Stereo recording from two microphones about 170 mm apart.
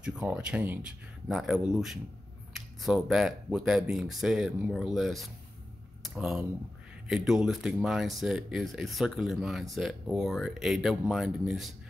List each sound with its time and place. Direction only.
0.0 s speech: 5° right (ahead or behind)